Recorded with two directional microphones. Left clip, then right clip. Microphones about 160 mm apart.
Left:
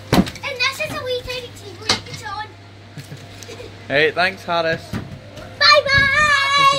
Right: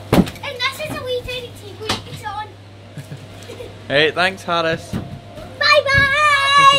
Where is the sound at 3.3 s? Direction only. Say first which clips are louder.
Right 2 dB; 5° right (ahead or behind).